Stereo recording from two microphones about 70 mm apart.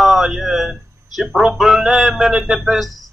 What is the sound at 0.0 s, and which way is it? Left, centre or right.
Speech, centre.